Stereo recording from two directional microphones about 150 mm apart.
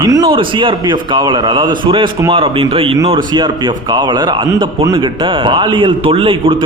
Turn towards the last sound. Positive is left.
turn(degrees=-35)  # may be behind; listen again after turning